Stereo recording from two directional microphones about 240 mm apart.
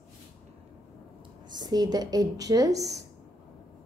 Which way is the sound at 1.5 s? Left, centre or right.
Centre.